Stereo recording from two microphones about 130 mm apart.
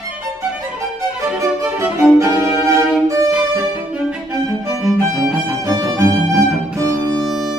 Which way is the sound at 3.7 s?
5° right (ahead or behind).